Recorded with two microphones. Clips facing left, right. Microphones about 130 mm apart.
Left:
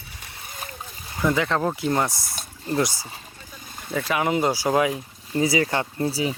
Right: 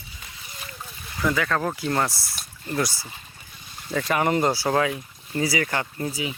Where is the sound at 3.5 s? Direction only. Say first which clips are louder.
Left 3 dB; 45° left (ahead or behind).